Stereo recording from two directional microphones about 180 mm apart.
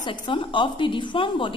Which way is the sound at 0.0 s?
30° left (ahead or behind).